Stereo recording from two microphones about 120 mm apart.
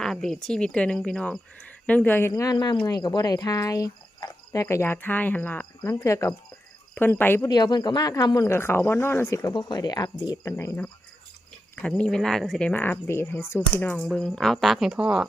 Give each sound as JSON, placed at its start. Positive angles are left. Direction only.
{"t": 0.0, "sound": "speech", "side_deg": 5}
{"t": 2.3, "sound": "speech", "side_deg": 30}
{"t": 7.4, "sound": "speech", "side_deg": 35}
{"t": 8.4, "sound": "speech", "side_deg": 20}
{"t": 9.6, "sound": "speech", "side_deg": 35}
{"t": 10.5, "sound": "speech", "side_deg": 20}
{"t": 11.8, "sound": "speech", "side_deg": 10}
{"t": 13.9, "sound": "speech", "side_deg": 5}